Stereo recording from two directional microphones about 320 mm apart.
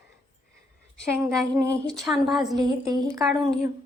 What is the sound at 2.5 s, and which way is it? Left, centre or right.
Speech, centre.